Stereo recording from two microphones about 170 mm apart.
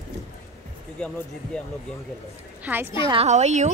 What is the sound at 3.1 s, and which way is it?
Speech, 40° right (ahead or behind).